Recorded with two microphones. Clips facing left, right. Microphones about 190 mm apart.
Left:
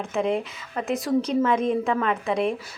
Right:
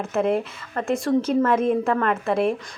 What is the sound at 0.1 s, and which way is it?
A woman's voice, centre (ahead or behind).